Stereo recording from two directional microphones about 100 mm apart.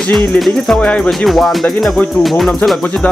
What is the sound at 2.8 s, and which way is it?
Speech, 15° left (ahead or behind).